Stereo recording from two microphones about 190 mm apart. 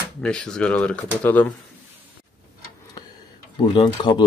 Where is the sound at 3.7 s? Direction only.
25° left (ahead or behind).